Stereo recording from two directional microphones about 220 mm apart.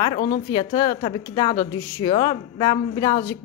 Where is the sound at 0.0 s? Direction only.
20° left (ahead or behind).